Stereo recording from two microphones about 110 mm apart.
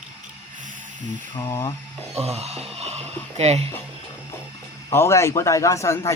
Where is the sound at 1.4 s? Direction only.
30° left (ahead or behind).